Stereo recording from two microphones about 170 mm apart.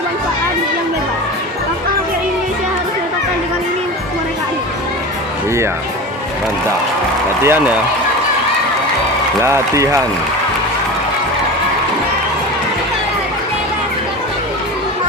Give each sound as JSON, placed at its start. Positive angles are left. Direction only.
{"t": 7.4, "sound": "speech", "side_deg": -10}
{"t": 9.4, "sound": "speech", "side_deg": -15}